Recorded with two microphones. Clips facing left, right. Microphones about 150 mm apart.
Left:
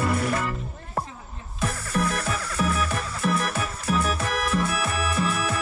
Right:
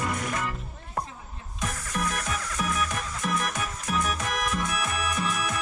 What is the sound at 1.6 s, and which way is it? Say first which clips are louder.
Music: left 5 dB; 30° left (ahead or behind).